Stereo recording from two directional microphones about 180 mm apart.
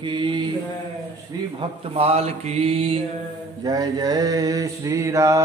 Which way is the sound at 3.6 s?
20° right (ahead or behind).